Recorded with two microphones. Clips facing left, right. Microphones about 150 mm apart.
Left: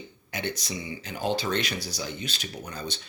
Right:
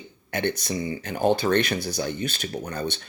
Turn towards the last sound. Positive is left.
turn(degrees=-60)  # may be behind; listen again after turning